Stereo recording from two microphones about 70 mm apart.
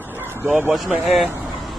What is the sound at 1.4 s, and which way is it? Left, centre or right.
Vehicle, centre.